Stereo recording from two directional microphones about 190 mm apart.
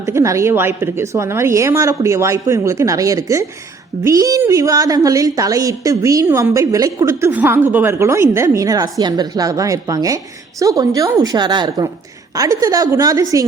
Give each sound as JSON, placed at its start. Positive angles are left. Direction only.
{"t": 0.0, "sound": "a woman's voice", "side_deg": -15}